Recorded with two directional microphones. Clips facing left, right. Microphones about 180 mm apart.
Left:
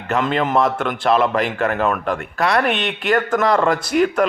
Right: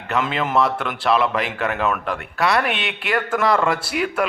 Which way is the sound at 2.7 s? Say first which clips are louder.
Left 5 dB; 45° left (ahead or behind).